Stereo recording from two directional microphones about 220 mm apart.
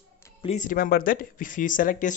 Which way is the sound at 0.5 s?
35° left (ahead or behind).